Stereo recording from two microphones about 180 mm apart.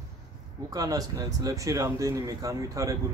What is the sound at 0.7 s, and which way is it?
Speech, 20° right (ahead or behind).